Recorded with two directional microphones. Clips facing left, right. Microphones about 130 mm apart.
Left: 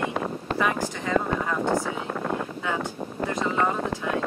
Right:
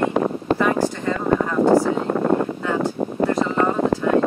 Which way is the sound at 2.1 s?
50° right (ahead or behind).